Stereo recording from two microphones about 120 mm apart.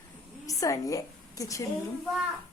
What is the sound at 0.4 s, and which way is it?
A woman's voice, 30° left (ahead or behind).